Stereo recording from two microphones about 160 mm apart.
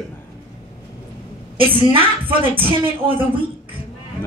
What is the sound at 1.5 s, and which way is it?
A woman's voice, 35° right (ahead or behind).